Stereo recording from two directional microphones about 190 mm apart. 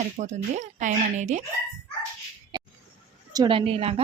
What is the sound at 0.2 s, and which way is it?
Speech, 40° right (ahead or behind).